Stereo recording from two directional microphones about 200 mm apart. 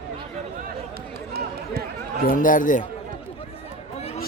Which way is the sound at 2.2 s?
45° left (ahead or behind).